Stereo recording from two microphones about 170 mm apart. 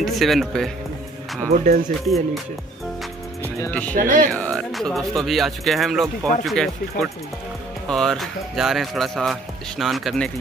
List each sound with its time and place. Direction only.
0.0 s speech: centre (ahead or behind)
1.5 s speech: 55° right (ahead or behind)
3.6 s speech: 10° left (ahead or behind)
3.9 s speech: 50° right (ahead or behind)
4.3 s speech: 5° left (ahead or behind)